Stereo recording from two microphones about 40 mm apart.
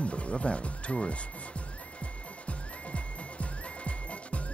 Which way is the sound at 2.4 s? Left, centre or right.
Left.